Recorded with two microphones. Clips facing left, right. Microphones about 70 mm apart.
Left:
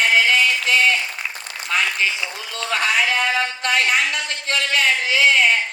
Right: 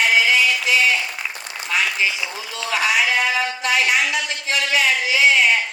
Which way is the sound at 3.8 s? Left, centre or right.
Left.